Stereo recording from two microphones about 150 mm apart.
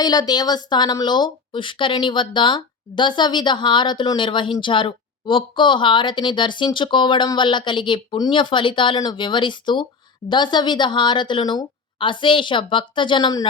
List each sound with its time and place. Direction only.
0.0 s a woman's voice: 25° left (ahead or behind)